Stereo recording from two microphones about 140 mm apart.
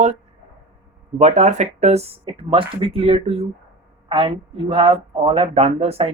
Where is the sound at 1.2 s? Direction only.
55° right (ahead or behind).